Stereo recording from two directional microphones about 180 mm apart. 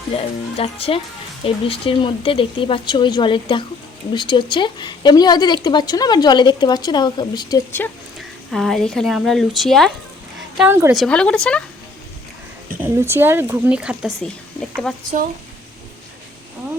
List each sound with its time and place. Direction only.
0.1 s speech: 30° left (ahead or behind)
7.8 s speech: 10° left (ahead or behind)
10.6 s speech: 10° right (ahead or behind)
10.9 s speech: 5° left (ahead or behind)
12.8 s speech: 10° right (ahead or behind)